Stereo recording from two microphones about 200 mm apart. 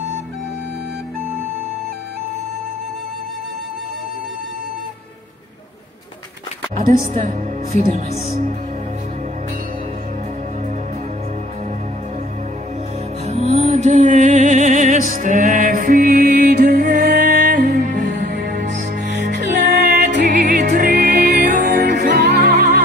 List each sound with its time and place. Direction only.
7.2 s speech: 40° right (ahead or behind)
13.2 s music: 30° right (ahead or behind); by 17.8 s 55° right (ahead or behind)
17.8 s music: 40° right (ahead or behind)
21.4 s music: 50° right (ahead or behind)